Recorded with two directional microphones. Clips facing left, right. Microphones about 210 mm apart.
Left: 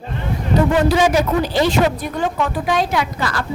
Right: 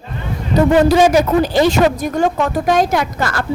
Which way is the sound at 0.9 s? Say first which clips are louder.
Right 4 dB; 45° right (ahead or behind).